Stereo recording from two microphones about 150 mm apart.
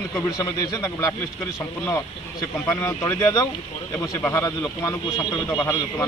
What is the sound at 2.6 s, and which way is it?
A man's voice, 20° left (ahead or behind).